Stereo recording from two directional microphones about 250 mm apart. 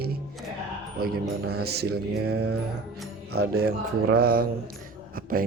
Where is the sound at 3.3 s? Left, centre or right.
Right.